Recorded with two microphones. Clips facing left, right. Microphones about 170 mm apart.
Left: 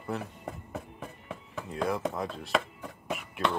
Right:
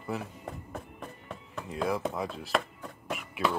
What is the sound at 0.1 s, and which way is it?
Speech, centre (ahead or behind).